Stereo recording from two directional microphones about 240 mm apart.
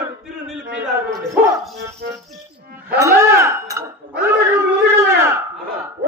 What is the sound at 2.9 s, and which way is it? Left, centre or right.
Speech, centre.